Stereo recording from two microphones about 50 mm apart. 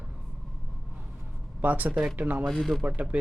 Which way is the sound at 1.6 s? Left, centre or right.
Right.